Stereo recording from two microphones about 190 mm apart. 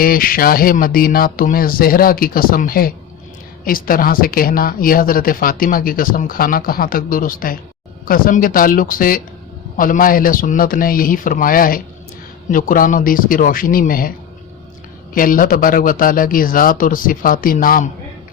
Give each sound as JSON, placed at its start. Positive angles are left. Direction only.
{"t": 0.0, "sound": "speech", "side_deg": 50}
{"t": 15.1, "sound": "speech", "side_deg": 45}